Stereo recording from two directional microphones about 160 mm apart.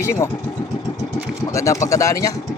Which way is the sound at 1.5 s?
20° left (ahead or behind).